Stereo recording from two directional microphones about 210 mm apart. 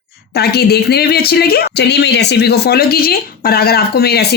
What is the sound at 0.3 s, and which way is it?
Speech, 50° left (ahead or behind).